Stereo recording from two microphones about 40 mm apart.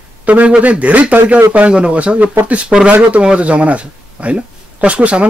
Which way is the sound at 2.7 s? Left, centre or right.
Centre.